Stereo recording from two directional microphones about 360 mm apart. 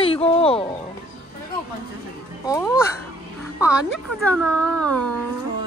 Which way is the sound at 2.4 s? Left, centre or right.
Centre.